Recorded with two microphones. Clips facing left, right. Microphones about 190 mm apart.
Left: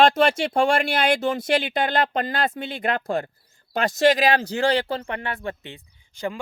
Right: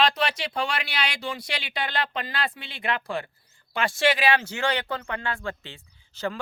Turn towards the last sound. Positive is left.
turn(degrees=15)  # may be behind; listen again after turning